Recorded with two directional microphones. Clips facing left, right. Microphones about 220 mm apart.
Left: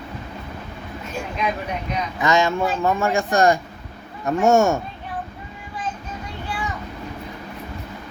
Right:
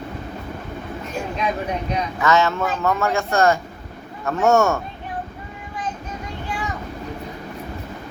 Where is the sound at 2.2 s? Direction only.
15° left (ahead or behind).